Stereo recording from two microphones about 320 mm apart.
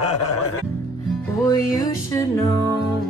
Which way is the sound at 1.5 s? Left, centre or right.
Centre.